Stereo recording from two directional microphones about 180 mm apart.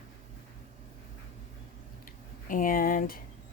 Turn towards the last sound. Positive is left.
turn(degrees=50)  # may be behind; listen again after turning